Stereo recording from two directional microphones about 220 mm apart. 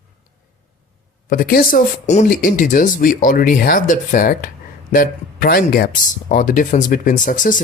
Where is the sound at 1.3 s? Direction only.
40° left (ahead or behind).